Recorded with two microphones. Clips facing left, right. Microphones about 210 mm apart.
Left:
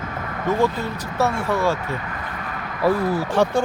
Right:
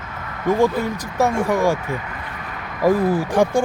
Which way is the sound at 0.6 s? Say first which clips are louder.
Right 4 dB; 15° right (ahead or behind).